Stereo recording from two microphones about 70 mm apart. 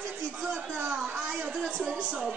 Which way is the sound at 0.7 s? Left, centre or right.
Right.